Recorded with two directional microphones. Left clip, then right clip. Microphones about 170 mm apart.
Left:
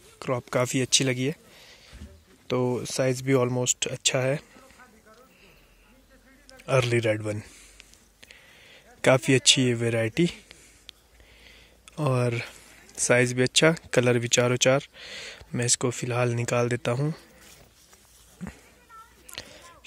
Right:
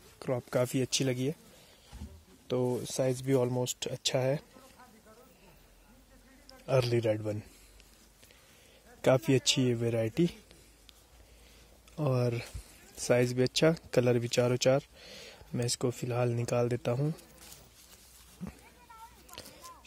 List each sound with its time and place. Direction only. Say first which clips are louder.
0.2 s speech: left 5 dB; 10° left (ahead or behind)
2.4 s speech: left 5 dB; 20° left (ahead or behind)
6.6 s a man's voice: left 5 dB; 5° left (ahead or behind)
9.0 s a man's voice: left 7 dB; 10° left (ahead or behind)
18.4 s a sound: left 5 dB; 5° left (ahead or behind)